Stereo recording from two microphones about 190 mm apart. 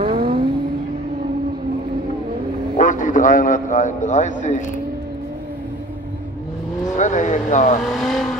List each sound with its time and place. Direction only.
0.0 s vehicle: 30° right (ahead or behind)
2.8 s a man's voice: 45° left (ahead or behind)
7.0 s vehicle: 40° left (ahead or behind)
7.8 s vehicle: centre (ahead or behind)